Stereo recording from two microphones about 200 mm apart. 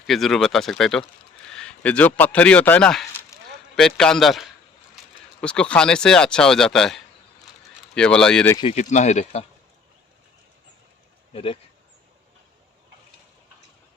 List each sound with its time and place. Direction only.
0.1 s a man's voice: centre (ahead or behind)
3.3 s a sound: 15° left (ahead or behind)
3.8 s speech: 5° left (ahead or behind)
8.5 s speech: 30° left (ahead or behind)
11.3 s speech: 25° left (ahead or behind)